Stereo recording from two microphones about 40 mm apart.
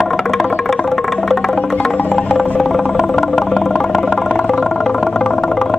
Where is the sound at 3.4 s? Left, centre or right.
Centre.